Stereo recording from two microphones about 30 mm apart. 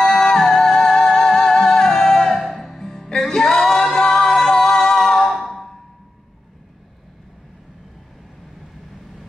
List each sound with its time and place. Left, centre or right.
0.0 s music: centre
2.4 s music: centre
3.2 s singing: centre